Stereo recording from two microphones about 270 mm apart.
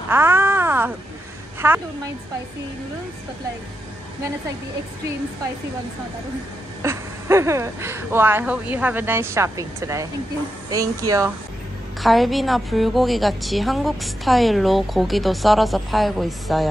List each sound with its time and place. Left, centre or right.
0.1 s a sound: centre
1.6 s speech: centre
6.8 s speech: centre
11.1 s speech: centre
12.0 s a woman's voice: centre